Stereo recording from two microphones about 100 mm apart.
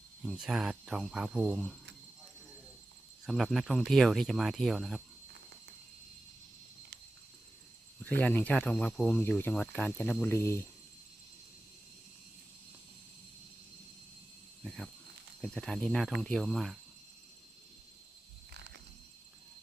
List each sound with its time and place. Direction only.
0.2 s speech: 5° right (ahead or behind)
3.2 s speech: centre (ahead or behind)
8.1 s speech: 20° left (ahead or behind)
14.6 s a sound: 5° left (ahead or behind)
15.4 s speech: 5° left (ahead or behind)